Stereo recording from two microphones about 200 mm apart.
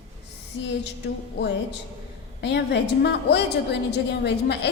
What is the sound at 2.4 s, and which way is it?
A woman's voice, 60° left (ahead or behind).